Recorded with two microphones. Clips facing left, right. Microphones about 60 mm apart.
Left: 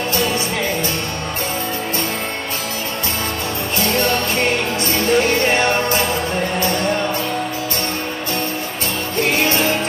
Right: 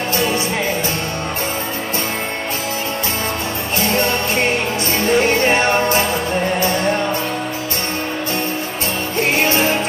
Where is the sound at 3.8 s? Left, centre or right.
Right.